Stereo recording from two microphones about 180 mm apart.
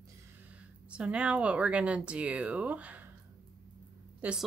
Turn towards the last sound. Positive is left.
turn(degrees=-5)  # may be behind; listen again after turning